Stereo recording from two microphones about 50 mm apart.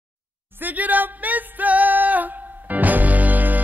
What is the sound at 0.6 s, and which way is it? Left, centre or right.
Music, right.